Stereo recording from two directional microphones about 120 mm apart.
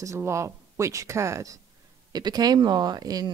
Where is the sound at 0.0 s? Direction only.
25° right (ahead or behind).